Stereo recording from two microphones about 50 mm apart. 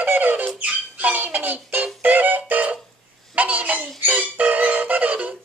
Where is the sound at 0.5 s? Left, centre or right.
Right.